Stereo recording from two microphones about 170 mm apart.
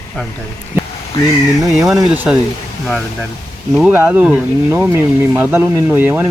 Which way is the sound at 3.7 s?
5° right (ahead or behind).